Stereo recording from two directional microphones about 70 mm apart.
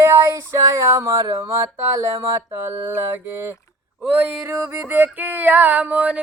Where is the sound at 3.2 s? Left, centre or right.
Right.